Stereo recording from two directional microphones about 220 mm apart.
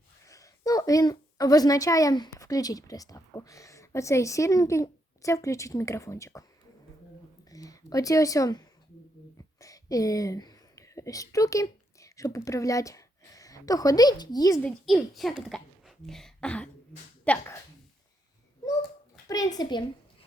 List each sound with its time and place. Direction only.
0.3 s a woman's voice: 15° left (ahead or behind)
7.5 s a woman's voice: 15° left (ahead or behind)
14.6 s a woman's voice: centre (ahead or behind)
19.3 s a child's voice: 15° left (ahead or behind)